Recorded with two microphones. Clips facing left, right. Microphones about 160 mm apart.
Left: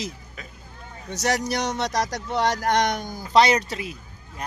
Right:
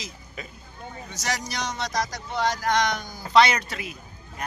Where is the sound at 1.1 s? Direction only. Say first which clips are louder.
Left 8 dB; 60° left (ahead or behind).